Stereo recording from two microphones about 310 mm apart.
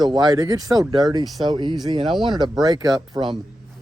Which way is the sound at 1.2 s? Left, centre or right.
Centre.